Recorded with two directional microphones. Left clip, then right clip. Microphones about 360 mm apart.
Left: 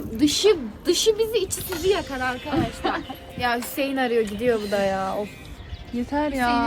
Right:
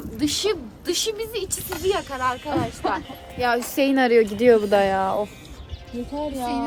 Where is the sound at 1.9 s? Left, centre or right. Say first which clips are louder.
Even; centre.